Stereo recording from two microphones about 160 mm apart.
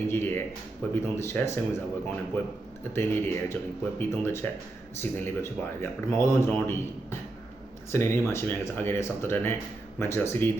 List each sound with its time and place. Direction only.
0.1 s speech: 15° left (ahead or behind)